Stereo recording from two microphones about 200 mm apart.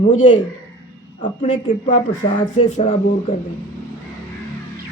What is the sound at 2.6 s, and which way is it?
Speech, 35° left (ahead or behind).